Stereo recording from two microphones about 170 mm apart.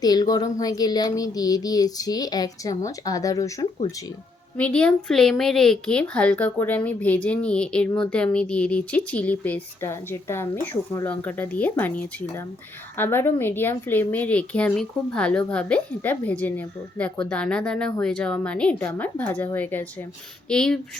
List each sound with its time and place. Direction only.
0.0 s speech: 25° left (ahead or behind)
4.5 s speech: 5° left (ahead or behind)